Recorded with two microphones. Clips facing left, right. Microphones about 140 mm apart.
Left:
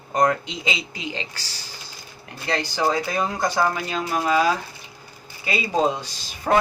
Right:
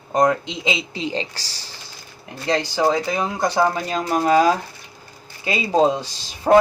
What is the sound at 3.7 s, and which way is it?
Speech, 40° right (ahead or behind).